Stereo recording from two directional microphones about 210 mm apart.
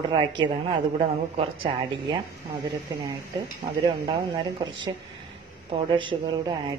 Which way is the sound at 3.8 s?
20° right (ahead or behind).